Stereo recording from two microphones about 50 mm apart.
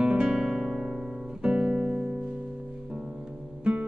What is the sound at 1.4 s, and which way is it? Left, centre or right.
Music, centre.